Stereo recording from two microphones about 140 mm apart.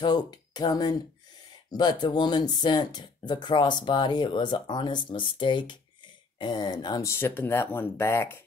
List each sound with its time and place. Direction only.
0.0 s speech: 30° left (ahead or behind)